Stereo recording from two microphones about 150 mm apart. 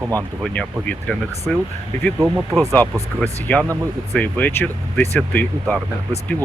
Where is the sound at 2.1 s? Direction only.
15° right (ahead or behind).